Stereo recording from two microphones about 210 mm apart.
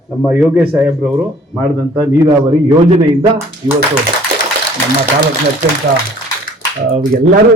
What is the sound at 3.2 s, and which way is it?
Speech, 10° right (ahead or behind).